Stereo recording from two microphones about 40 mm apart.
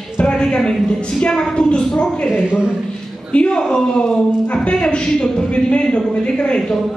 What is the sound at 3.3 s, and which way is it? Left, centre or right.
A woman's voice, left.